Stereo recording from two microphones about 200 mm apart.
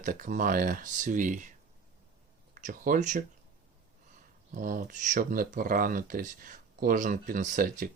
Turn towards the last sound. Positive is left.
turn(degrees=-45)  # may be behind; listen again after turning